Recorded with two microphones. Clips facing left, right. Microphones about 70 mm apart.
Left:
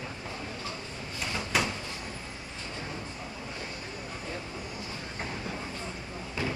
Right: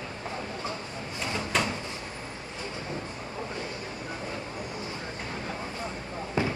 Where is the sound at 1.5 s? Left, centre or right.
Centre.